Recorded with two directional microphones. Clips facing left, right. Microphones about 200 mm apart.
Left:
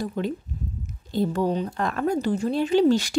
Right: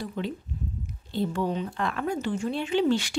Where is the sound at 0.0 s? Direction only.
45° left (ahead or behind).